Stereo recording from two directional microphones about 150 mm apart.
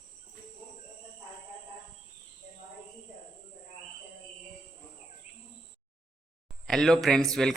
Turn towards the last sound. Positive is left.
turn(degrees=0)  # may be behind; listen again after turning